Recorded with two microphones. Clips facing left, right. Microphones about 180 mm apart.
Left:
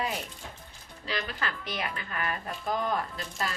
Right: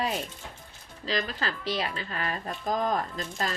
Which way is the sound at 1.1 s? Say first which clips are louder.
Right 3 dB; 35° right (ahead or behind).